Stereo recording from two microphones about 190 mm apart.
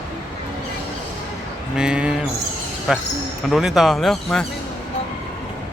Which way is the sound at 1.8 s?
5° right (ahead or behind).